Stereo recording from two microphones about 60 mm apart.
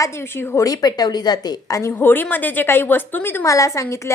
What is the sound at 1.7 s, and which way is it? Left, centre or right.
A woman's voice, left.